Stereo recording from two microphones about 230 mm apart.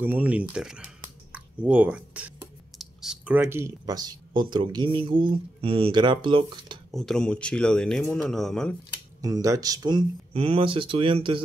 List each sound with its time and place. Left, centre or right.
0.0 s speech: centre
6.9 s speech: centre
9.2 s speech: centre